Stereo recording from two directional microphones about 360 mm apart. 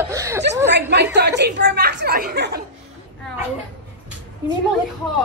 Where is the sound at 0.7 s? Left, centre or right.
Right.